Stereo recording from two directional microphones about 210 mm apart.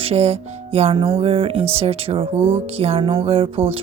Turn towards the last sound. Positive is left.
turn(degrees=-25)  # may be behind; listen again after turning